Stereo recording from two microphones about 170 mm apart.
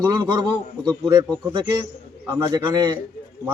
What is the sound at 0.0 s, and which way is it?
A man's voice, 25° right (ahead or behind).